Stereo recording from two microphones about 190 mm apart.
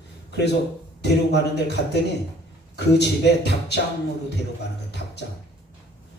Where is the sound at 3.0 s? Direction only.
65° left (ahead or behind).